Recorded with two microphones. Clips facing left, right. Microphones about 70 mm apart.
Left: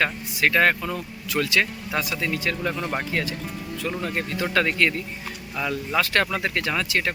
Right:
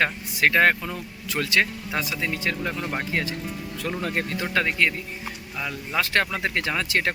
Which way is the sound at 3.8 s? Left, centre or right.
Right.